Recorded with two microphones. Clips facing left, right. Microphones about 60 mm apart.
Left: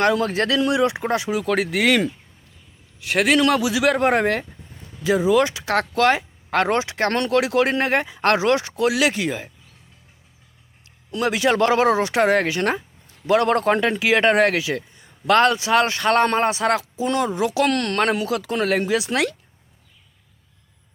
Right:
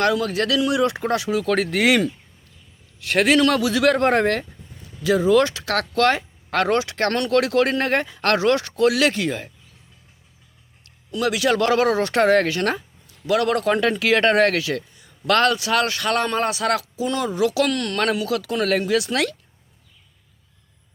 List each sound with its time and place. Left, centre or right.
0.0 s a man's voice: left; by 1.8 s centre
3.0 s a man's voice: centre; by 7.3 s left
7.3 s speech: centre
11.1 s a man's voice: left
13.1 s a man's voice: left
13.8 s a man's voice: centre
17.7 s speech: left
18.0 s a man's voice: left